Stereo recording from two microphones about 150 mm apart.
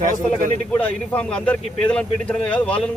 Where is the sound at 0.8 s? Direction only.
10° left (ahead or behind).